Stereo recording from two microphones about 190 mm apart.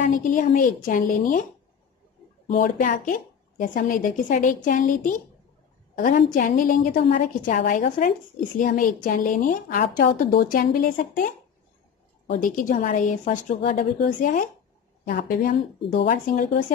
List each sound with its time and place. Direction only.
0.0 s a woman's voice: 45° left (ahead or behind)
2.4 s a woman's voice: 40° left (ahead or behind)
6.3 s a woman's voice: 45° left (ahead or behind)
12.4 s a woman's voice: 45° left (ahead or behind)